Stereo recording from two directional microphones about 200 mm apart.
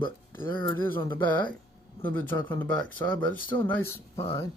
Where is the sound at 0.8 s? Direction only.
10° left (ahead or behind).